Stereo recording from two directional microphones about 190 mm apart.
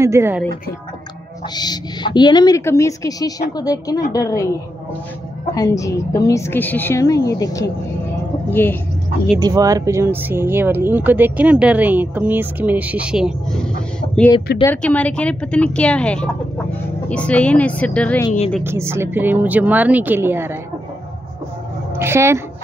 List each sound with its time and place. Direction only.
0.0 s speech: 15° right (ahead or behind)
1.5 s a woman's voice: 20° left (ahead or behind)
5.5 s a woman's voice: 15° left (ahead or behind)
9.4 s speech: 20° right (ahead or behind)
14.6 s a woman's voice: 10° left (ahead or behind)
18.6 s speech: 15° right (ahead or behind)
21.9 s a woman's voice: 15° right (ahead or behind)